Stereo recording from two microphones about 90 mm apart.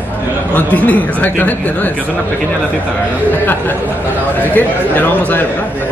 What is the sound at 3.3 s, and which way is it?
A man's voice, 20° left (ahead or behind).